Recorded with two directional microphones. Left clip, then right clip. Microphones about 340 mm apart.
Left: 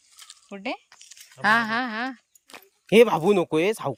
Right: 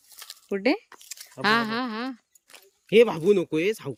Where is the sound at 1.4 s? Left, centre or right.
Centre.